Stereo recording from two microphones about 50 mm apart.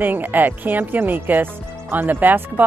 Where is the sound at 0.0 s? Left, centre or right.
Right.